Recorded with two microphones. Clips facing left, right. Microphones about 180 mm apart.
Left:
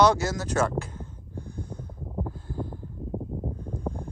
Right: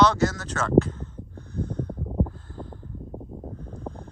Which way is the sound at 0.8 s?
10° left (ahead or behind).